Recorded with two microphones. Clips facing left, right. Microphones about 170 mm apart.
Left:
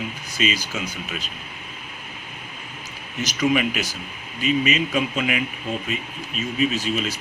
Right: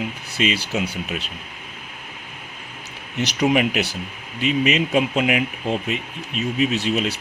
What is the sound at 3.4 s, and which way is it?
Speech, 65° right (ahead or behind).